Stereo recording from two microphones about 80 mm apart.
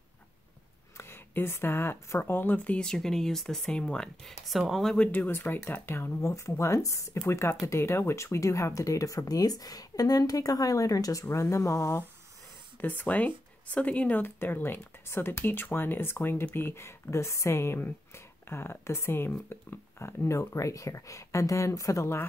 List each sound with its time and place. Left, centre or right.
0.9 s speech: left; by 4.9 s centre
4.9 s speech: centre; by 12.0 s left
12.8 s speech: left